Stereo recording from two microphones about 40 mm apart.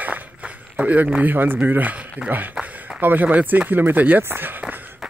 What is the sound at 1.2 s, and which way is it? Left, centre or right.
Speech, right.